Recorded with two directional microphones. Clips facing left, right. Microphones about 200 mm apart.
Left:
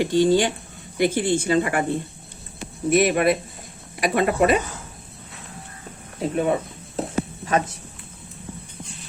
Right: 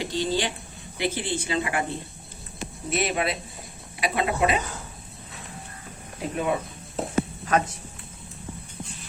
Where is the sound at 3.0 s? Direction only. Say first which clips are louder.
Left 6 dB; 55° left (ahead or behind).